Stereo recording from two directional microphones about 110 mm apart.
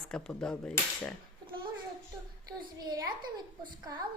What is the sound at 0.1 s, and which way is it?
A woman's voice, 5° left (ahead or behind).